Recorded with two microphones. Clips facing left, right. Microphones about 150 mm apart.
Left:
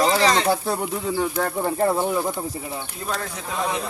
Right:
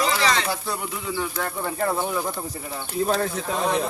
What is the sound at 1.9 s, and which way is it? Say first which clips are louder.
Speech: left 3 dB; 20° left (ahead or behind).